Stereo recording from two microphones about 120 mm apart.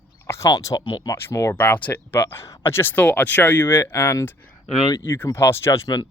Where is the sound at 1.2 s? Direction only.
20° left (ahead or behind).